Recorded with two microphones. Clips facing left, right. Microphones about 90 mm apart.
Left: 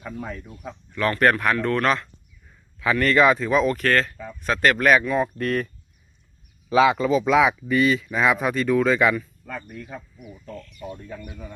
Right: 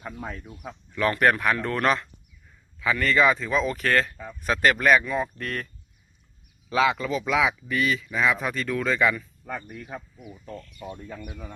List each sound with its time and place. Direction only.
0.0 s speech: 5° right (ahead or behind)
1.5 s speech: 15° right (ahead or behind)
3.2 s speech: 20° left (ahead or behind)
3.4 s speech: 10° left (ahead or behind)
3.7 s speech: 10° right (ahead or behind); by 5.6 s 5° left (ahead or behind)
6.7 s speech: 15° left (ahead or behind)
9.7 s speech: 10° right (ahead or behind)
10.8 s speech: 10° right (ahead or behind)